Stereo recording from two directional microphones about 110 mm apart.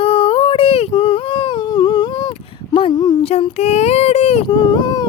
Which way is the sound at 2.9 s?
30° left (ahead or behind).